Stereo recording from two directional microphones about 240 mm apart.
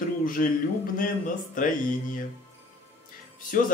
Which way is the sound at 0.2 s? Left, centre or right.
Left.